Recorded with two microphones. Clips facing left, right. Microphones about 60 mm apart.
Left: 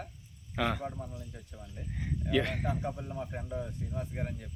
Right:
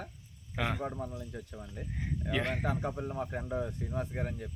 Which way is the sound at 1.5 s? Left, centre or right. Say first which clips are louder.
Right 3 dB; right.